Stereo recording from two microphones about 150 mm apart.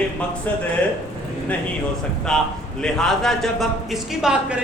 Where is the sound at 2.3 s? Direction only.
5° left (ahead or behind).